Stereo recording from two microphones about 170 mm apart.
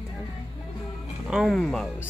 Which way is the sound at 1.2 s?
5° right (ahead or behind).